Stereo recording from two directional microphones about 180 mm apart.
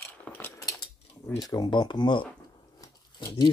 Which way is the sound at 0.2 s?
15° left (ahead or behind).